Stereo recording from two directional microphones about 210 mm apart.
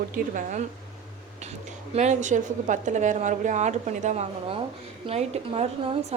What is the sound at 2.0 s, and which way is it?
A woman's voice, 35° right (ahead or behind).